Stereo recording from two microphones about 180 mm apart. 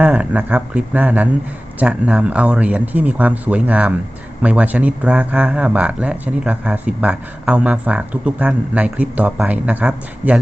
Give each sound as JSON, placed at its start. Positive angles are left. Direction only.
{"t": 0.0, "sound": "speech", "side_deg": -5}